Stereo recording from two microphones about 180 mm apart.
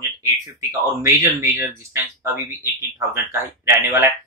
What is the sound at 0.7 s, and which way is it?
Speech, 15° right (ahead or behind).